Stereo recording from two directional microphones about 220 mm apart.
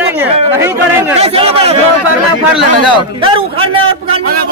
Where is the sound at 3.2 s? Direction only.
25° right (ahead or behind).